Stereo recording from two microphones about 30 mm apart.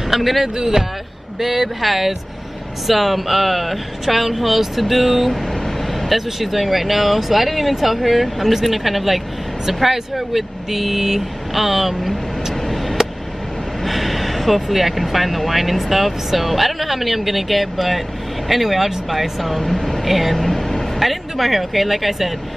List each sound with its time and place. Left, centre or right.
0.1 s speech: centre
0.6 s speech: centre
5.4 s speech: centre
12.5 s a sound: centre
13.8 s speech: centre
19.6 s speech: centre
20.1 s speech: centre
20.3 s vehicle: centre
21.0 s speech: centre